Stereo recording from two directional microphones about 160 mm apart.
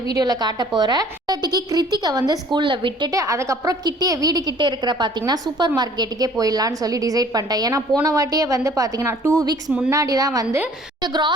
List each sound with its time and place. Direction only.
0.2 s a woman's voice: 25° right (ahead or behind)
9.6 s a woman's voice: 5° right (ahead or behind)
9.9 s a woman's voice: 20° right (ahead or behind)